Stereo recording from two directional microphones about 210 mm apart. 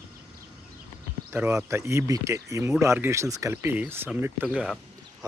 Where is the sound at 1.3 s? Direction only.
10° right (ahead or behind).